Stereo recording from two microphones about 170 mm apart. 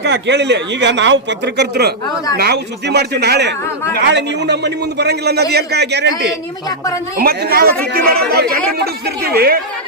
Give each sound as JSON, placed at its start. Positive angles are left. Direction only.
{"t": 0.0, "sound": "speech", "side_deg": -90}
{"t": 2.3, "sound": "a man's voice", "side_deg": -65}
{"t": 7.2, "sound": "a woman's voice", "side_deg": -65}